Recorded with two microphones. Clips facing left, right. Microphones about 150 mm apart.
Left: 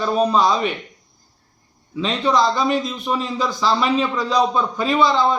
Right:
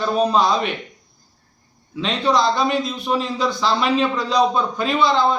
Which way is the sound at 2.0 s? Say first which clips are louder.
Left 1 dB; centre (ahead or behind).